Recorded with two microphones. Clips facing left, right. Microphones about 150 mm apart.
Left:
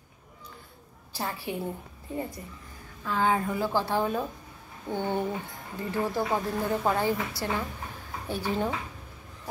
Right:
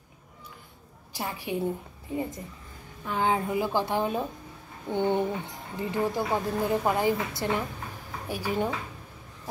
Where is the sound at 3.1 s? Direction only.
20° right (ahead or behind).